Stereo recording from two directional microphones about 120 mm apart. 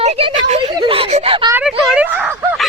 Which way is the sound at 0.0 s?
55° right (ahead or behind).